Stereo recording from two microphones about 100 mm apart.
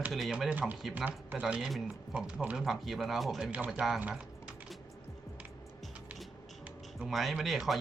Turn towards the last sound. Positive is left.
turn(degrees=0)  # may be behind; listen again after turning